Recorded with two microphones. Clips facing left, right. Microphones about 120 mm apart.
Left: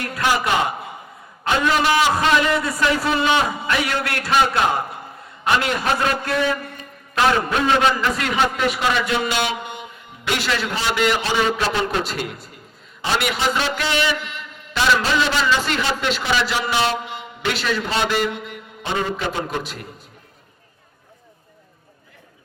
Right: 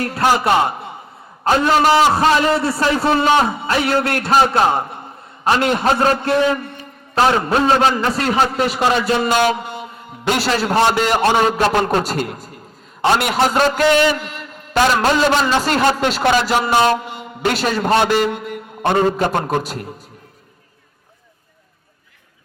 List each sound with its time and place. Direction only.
0.0 s a man's voice: 40° right (ahead or behind)